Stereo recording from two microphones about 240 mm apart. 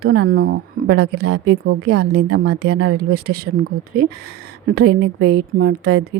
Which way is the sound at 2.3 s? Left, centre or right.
Right.